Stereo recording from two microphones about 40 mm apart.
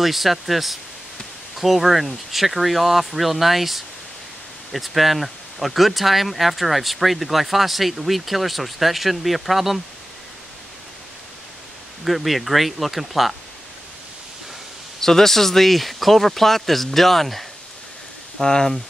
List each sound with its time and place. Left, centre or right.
0.0 s speech: centre
12.0 s speech: centre
15.0 s speech: centre
18.4 s speech: centre